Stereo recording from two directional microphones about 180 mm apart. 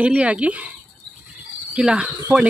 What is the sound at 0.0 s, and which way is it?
Speech, 5° right (ahead or behind).